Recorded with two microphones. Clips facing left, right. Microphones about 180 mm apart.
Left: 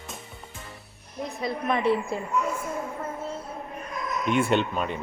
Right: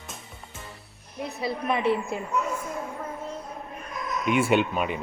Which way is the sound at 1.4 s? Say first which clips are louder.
Even; 5° right (ahead or behind).